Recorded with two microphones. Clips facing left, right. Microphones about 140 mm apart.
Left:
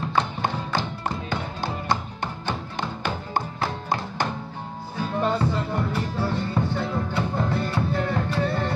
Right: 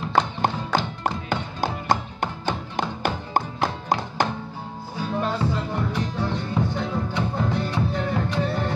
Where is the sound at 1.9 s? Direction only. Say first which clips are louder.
Right 3 dB; 45° right (ahead or behind).